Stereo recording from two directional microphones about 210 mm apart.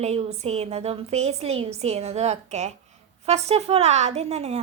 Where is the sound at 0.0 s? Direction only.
30° right (ahead or behind).